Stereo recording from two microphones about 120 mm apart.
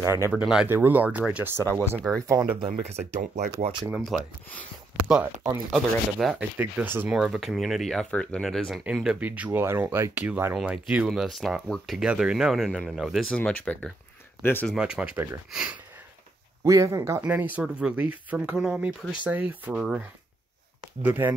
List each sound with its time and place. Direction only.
0.0 s speech: 25° right (ahead or behind)
0.4 s speech: 5° right (ahead or behind)
0.7 s speech: 20° right (ahead or behind)
2.6 s speech: 65° right (ahead or behind)
4.1 s speech: centre (ahead or behind)
6.6 s speech: 15° right (ahead or behind)
7.1 s speech: 5° right (ahead or behind)
11.1 s speech: centre (ahead or behind)
13.4 s speech: 15° left (ahead or behind)
14.8 s speech: 10° right (ahead or behind)
16.6 s speech: 25° right (ahead or behind)
17.3 s speech: 15° right (ahead or behind)
21.0 s speech: 15° right (ahead or behind)